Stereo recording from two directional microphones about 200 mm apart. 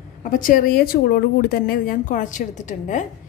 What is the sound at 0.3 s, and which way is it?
A woman's voice, 40° left (ahead or behind).